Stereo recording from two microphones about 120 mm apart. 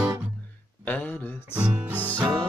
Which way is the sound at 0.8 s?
15° left (ahead or behind).